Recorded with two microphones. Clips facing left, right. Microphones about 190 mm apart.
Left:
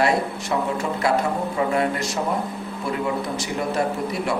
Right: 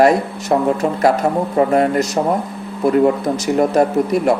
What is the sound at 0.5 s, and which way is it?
Speech, 50° right (ahead or behind).